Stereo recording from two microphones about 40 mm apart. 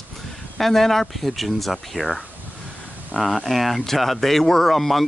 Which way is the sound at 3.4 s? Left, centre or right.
Centre.